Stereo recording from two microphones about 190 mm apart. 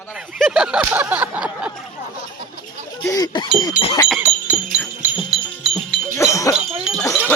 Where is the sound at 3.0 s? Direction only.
20° left (ahead or behind).